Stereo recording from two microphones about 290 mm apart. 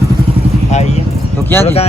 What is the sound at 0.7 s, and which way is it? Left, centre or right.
Speech, left.